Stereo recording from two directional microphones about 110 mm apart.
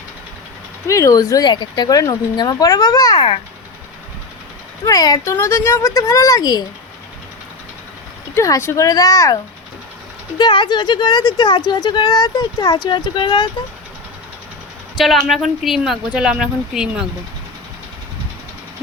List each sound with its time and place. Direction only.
0.9 s speech: 30° left (ahead or behind)
4.9 s speech: 35° left (ahead or behind)
5.2 s a woman's voice: 25° left (ahead or behind)
8.4 s a woman's voice: 25° left (ahead or behind)
10.3 s speech: 45° left (ahead or behind)
14.9 s speech: centre (ahead or behind)